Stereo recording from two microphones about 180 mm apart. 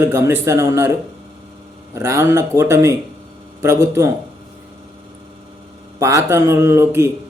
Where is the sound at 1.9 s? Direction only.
15° right (ahead or behind).